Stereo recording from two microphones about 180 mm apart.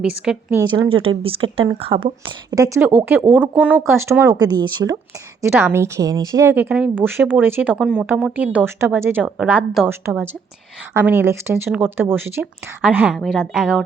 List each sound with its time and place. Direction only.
0.0 s a woman's voice: 5° right (ahead or behind)
0.6 s a woman's voice: 30° right (ahead or behind)
5.4 s a woman's voice: 10° right (ahead or behind)